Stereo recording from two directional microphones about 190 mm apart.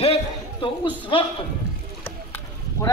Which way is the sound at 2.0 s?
10° left (ahead or behind).